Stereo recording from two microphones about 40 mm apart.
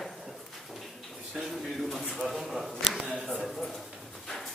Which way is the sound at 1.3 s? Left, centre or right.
Centre.